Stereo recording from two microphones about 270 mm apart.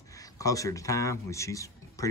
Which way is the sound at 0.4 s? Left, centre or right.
Centre.